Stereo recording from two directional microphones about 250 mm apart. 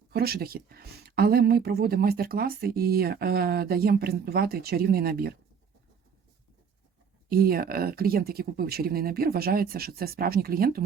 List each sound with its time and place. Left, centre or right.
0.1 s speech: right
7.3 s speech: right